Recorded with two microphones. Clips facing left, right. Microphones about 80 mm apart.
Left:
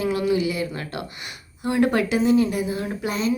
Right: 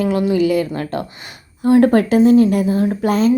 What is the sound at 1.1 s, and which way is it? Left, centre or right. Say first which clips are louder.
A woman's voice: right 1 dB; right.